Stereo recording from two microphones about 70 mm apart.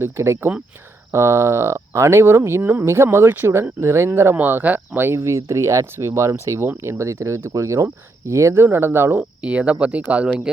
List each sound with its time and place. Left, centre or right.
0.0 s speech: right
4.4 s speech: right
6.7 s speech: right
7.0 s speech: right
8.6 s speech: right
9.4 s speech: centre